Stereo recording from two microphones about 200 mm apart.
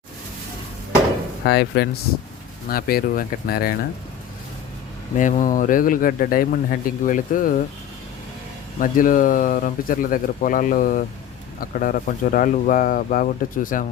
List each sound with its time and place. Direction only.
1.5 s speech: 55° left (ahead or behind)
5.1 s speech: 40° left (ahead or behind)
8.8 s speech: 40° left (ahead or behind)